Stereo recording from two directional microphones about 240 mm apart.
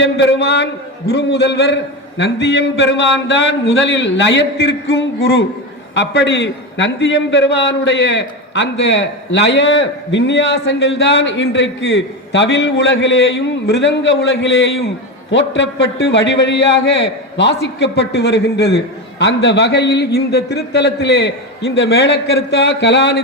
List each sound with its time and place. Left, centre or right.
0.0 s a man's voice: left